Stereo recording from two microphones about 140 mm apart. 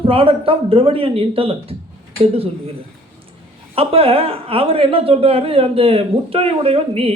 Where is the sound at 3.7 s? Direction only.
45° right (ahead or behind).